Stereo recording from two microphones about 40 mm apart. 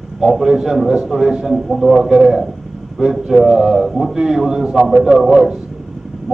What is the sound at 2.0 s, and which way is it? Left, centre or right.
A man's voice, right.